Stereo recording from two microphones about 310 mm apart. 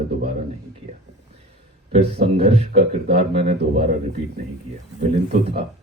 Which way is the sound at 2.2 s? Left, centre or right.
Centre.